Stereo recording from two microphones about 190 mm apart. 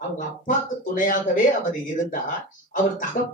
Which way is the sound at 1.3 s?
45° left (ahead or behind).